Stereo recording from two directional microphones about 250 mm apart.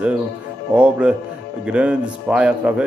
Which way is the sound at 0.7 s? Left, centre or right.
Centre.